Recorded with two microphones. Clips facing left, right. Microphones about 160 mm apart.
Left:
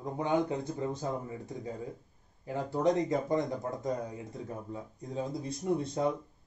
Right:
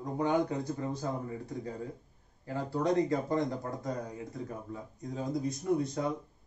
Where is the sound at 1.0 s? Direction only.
20° left (ahead or behind).